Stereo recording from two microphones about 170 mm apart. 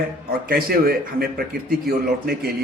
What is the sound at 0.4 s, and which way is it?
A man's voice, 65° right (ahead or behind).